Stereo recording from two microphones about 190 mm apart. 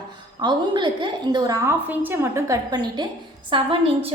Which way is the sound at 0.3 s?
25° right (ahead or behind).